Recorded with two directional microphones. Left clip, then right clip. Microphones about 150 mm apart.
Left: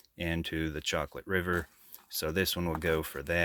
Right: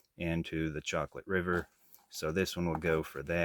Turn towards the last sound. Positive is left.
turn(degrees=25)  # may be behind; listen again after turning